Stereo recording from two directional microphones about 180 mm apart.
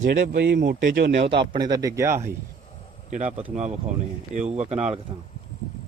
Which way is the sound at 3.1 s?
45° right (ahead or behind).